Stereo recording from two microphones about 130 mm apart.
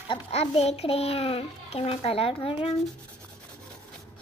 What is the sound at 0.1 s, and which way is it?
A child's voice, 50° left (ahead or behind).